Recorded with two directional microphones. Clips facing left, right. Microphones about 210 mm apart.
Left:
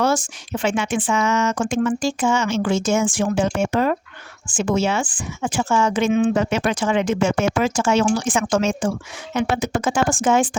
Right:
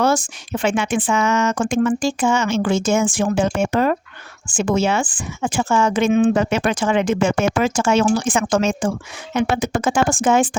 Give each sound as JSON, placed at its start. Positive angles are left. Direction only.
{"t": 0.6, "sound": "speech", "side_deg": -60}